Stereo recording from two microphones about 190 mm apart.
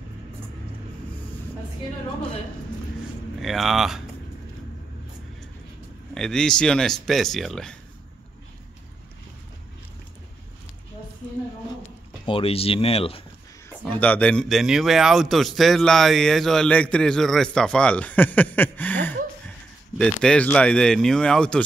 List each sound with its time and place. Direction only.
3.3 s a man's voice: centre (ahead or behind)
6.1 s a man's voice: 5° left (ahead or behind)
12.3 s speech: 30° left (ahead or behind)
13.8 s a man's voice: 10° left (ahead or behind)